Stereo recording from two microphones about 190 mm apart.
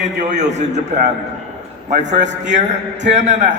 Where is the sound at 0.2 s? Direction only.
40° right (ahead or behind).